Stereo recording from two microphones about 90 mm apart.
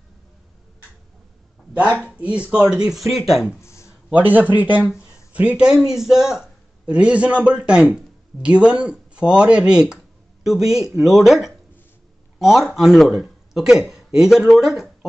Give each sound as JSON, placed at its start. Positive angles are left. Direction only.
{"t": 1.9, "sound": "speech", "side_deg": 15}
{"t": 2.1, "sound": "speech", "side_deg": -15}
{"t": 3.6, "sound": "a sound", "side_deg": 30}
{"t": 4.1, "sound": "a man's voice", "side_deg": -20}